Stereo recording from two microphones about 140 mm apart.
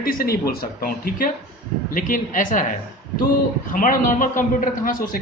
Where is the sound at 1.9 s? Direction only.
75° left (ahead or behind).